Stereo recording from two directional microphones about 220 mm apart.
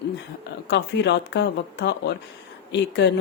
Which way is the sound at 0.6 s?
50° left (ahead or behind).